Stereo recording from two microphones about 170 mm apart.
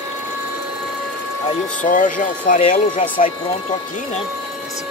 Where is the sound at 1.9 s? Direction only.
50° left (ahead or behind).